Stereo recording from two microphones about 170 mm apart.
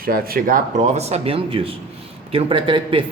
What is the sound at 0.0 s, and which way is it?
A man's voice, 60° right (ahead or behind).